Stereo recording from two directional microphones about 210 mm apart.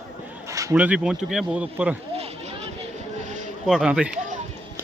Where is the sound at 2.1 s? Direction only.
30° right (ahead or behind).